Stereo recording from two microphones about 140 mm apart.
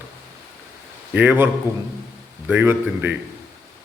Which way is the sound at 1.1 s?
10° right (ahead or behind).